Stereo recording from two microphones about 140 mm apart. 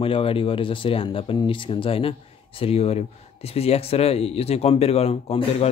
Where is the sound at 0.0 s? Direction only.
40° left (ahead or behind).